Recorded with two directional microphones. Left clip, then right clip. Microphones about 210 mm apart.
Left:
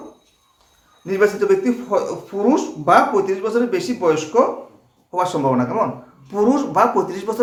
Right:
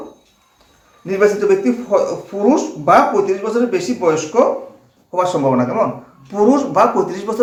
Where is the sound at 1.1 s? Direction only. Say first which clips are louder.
Right 3 dB; 20° left (ahead or behind).